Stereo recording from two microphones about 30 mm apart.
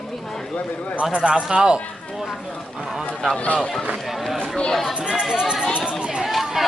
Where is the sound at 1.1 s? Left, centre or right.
Right.